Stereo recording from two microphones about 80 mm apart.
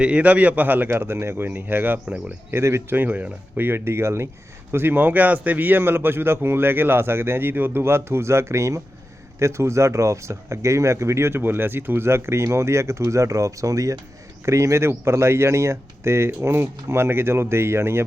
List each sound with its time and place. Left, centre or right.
0.0 s a man's voice: centre
2.0 s speech: centre
2.5 s a man's voice: right